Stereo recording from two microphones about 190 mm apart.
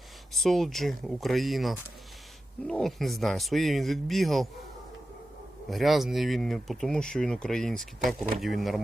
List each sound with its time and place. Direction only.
0.3 s speech: centre (ahead or behind)
5.7 s speech: centre (ahead or behind)